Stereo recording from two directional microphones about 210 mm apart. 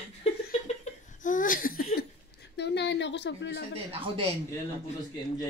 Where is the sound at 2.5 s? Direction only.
55° left (ahead or behind).